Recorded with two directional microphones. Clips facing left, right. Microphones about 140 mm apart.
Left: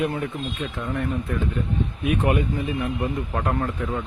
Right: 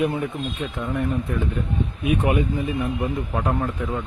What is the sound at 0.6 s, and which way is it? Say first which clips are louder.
Speech: right 2 dB; 15° right (ahead or behind).